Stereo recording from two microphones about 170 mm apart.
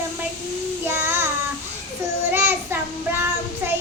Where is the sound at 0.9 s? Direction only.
15° right (ahead or behind).